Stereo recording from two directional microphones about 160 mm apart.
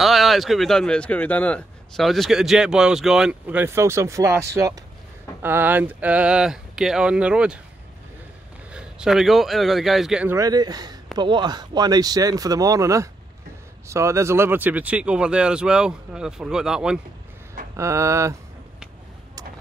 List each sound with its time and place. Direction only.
0.0 s speech: centre (ahead or behind); by 4.4 s 20° right (ahead or behind)
5.4 s speech: 15° right (ahead or behind)
8.7 s speech: 5° right (ahead or behind)
10.3 s speech: 25° right (ahead or behind); by 17.0 s 5° right (ahead or behind)
17.7 s speech: 20° right (ahead or behind)